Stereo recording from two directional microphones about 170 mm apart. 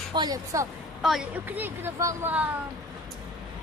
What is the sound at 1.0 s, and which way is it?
Speech, 5° right (ahead or behind).